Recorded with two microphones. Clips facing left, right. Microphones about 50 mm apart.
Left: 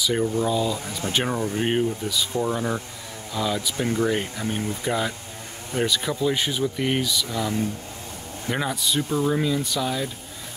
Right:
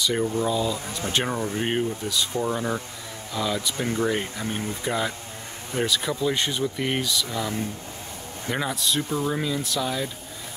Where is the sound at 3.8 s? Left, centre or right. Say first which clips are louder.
Left 2 dB; right.